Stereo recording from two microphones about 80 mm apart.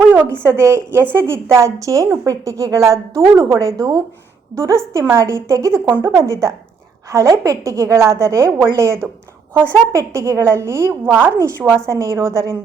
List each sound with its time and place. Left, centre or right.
0.0 s a sound: right
0.3 s a woman's voice: right
11.0 s a woman's voice: right
11.3 s a woman's voice: right